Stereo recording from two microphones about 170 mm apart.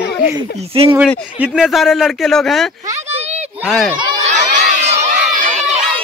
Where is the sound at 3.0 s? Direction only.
40° right (ahead or behind).